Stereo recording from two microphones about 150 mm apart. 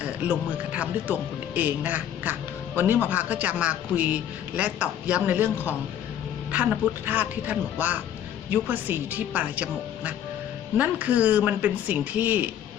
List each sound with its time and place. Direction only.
0.0 s a man's voice: 10° right (ahead or behind)
6.5 s a man's voice: 10° right (ahead or behind)